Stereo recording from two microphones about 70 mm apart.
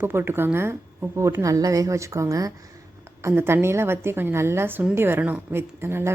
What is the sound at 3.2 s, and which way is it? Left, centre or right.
Speech, right.